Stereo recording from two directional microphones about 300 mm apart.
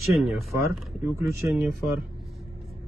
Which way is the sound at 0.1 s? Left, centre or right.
Centre.